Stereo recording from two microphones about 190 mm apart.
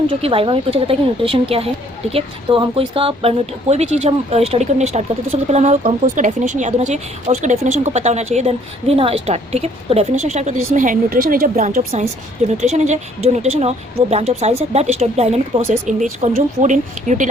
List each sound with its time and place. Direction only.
0.2 s a woman's voice: 30° right (ahead or behind)